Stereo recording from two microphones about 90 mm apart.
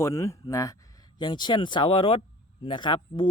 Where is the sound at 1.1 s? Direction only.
55° left (ahead or behind); by 2.2 s 90° left.